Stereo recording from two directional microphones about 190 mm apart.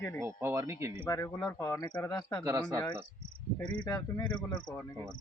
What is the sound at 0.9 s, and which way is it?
Speech, 20° left (ahead or behind).